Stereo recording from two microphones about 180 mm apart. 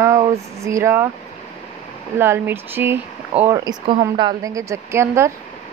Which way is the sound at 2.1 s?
15° right (ahead or behind).